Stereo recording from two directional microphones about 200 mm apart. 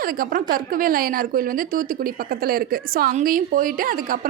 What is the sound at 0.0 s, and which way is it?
A woman's voice, 45° right (ahead or behind).